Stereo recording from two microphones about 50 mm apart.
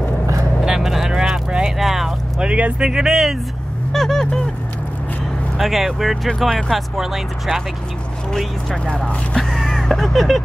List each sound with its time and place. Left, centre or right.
0.7 s vehicle: centre
2.4 s speech: right
2.8 s speech: centre
3.9 s a sound: centre
5.6 s speech: centre
8.3 s speech: centre
8.8 s speech: left
9.6 s vehicle: centre